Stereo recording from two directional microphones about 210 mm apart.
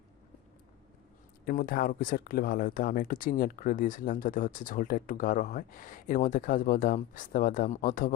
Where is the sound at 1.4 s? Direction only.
45° left (ahead or behind).